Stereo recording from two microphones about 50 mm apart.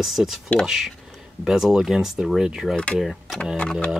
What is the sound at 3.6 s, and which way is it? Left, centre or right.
Speech, left.